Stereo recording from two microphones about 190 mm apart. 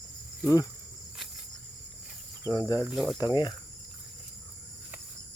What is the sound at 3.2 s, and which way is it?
Speech, 20° left (ahead or behind).